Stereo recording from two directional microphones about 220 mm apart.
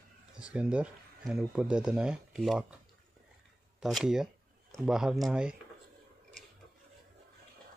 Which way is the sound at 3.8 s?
Centre (ahead or behind).